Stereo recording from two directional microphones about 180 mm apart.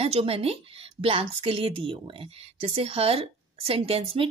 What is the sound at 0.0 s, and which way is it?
A woman's voice, 35° right (ahead or behind).